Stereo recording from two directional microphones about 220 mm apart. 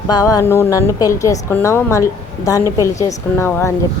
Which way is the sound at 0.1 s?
15° left (ahead or behind).